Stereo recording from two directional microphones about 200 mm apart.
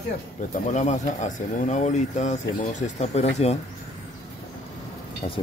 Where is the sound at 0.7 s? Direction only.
35° left (ahead or behind).